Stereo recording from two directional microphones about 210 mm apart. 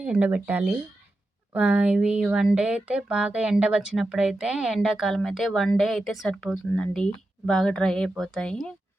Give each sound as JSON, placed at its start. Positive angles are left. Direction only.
{"t": 0.0, "sound": "speech", "side_deg": -5}